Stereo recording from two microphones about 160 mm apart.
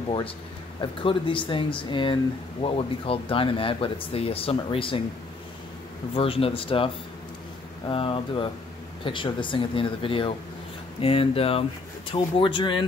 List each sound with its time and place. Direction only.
0.7 s speech: 30° left (ahead or behind)
6.1 s speech: 35° left (ahead or behind)
7.9 s speech: 35° left (ahead or behind)